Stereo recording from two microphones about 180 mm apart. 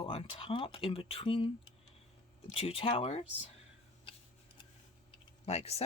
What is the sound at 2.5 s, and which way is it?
Speech, 30° left (ahead or behind).